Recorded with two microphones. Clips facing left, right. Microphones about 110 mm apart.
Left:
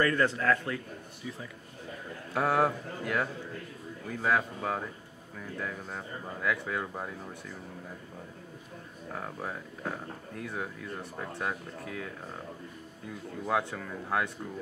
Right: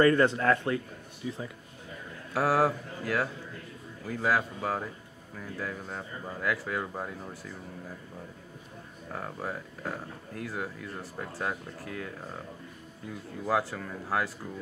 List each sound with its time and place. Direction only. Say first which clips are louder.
0.0 s a man's voice: right 4 dB; 25° right (ahead or behind)
2.3 s speech: right 1 dB; 5° right (ahead or behind)
9.1 s speech: right 2 dB; centre (ahead or behind)
13.5 s speech: right 2 dB; 5° right (ahead or behind)